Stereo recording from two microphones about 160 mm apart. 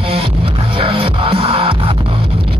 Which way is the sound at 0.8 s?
35° right (ahead or behind).